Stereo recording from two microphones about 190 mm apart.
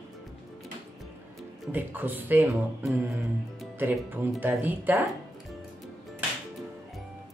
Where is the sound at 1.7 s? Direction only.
10° right (ahead or behind).